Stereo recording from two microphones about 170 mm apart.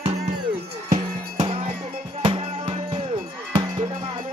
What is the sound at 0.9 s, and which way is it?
Music, 50° right (ahead or behind).